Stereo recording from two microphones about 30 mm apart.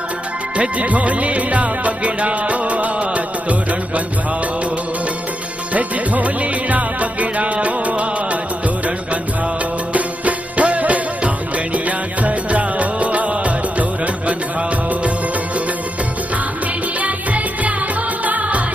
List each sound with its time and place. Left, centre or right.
0.8 s music: right
5.7 s music: right
9.9 s music: right
17.0 s music: right